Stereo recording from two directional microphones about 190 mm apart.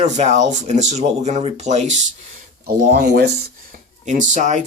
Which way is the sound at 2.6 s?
55° right (ahead or behind).